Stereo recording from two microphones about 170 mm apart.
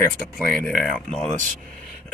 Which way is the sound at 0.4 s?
5° left (ahead or behind).